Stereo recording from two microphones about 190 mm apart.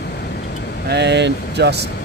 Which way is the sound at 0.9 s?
65° right (ahead or behind).